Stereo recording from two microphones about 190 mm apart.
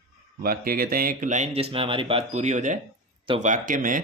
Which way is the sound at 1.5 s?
30° right (ahead or behind).